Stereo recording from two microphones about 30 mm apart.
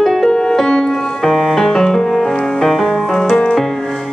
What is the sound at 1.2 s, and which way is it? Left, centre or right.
Music, centre.